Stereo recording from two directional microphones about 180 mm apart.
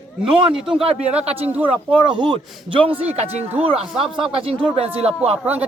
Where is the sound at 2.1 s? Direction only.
25° right (ahead or behind).